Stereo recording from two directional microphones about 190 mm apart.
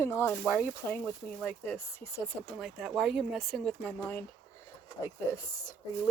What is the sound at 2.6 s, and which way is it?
Speech, centre (ahead or behind).